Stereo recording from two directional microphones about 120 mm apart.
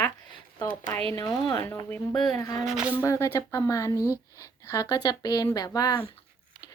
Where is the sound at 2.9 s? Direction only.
25° left (ahead or behind).